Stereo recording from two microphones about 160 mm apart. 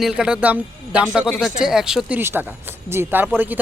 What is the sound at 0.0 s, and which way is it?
Speech, 5° right (ahead or behind).